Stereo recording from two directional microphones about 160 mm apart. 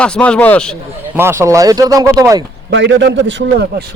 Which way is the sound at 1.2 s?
15° right (ahead or behind).